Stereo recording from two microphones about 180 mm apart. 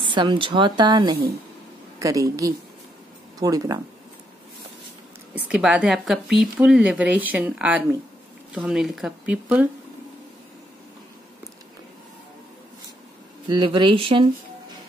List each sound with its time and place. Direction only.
0.0 s a woman's voice: 25° right (ahead or behind)
5.3 s a woman's voice: 5° right (ahead or behind)
13.5 s a woman's voice: 25° right (ahead or behind)